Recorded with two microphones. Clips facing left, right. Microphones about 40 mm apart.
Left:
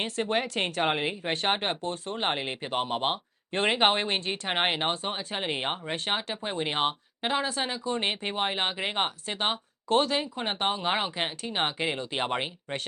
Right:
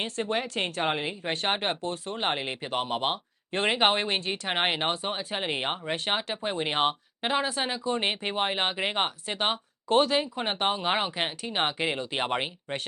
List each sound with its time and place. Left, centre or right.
0.2 s speech: centre
1.5 s speech: centre